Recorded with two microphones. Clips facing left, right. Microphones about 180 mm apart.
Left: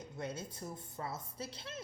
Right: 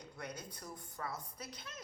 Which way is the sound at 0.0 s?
25° left (ahead or behind).